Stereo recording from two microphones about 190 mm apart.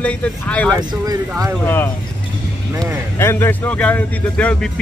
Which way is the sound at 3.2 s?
10° left (ahead or behind).